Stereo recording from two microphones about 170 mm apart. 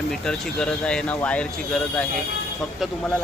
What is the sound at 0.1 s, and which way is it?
Speech, 5° left (ahead or behind).